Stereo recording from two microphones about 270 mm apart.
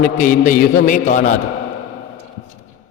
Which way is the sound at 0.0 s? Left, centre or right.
Left.